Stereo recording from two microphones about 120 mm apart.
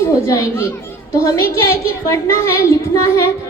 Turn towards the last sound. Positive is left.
turn(degrees=25)  # may be behind; listen again after turning